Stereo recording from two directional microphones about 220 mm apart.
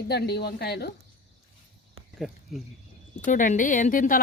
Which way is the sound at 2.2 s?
Centre (ahead or behind).